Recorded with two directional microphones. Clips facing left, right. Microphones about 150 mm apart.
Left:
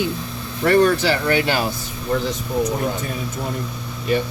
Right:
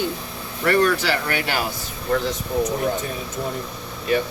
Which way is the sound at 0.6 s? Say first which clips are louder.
Left 3 dB; 25° left (ahead or behind).